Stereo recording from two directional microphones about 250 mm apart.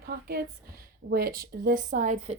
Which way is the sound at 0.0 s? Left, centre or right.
Right.